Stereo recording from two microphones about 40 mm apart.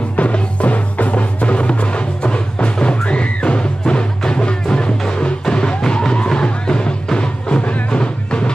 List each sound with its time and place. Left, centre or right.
0.1 s music: left